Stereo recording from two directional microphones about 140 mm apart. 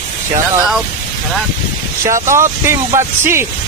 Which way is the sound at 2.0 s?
20° right (ahead or behind).